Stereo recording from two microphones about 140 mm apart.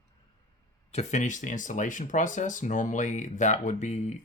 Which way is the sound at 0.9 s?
55° left (ahead or behind).